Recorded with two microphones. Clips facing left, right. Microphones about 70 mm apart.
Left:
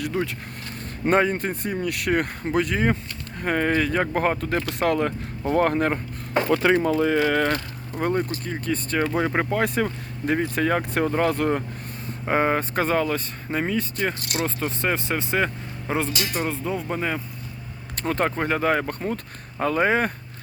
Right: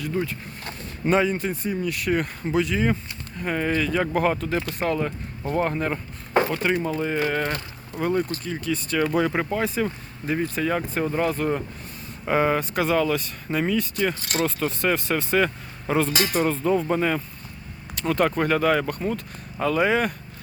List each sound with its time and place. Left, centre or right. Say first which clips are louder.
0.0 s speech: left 1 dB; left
1.0 s speech: left 1 dB; left
4.8 s speech: left 3 dB; left
6.7 s speech: left 5 dB; left
7.9 s speech: even; left
12.3 s speech: even; left
16.5 s speech: right 5 dB; centre
17.9 s speech: right 2 dB; left